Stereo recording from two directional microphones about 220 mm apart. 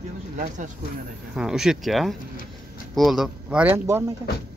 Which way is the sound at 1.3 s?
Centre (ahead or behind).